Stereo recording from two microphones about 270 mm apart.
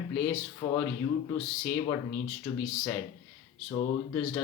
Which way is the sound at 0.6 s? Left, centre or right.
Centre.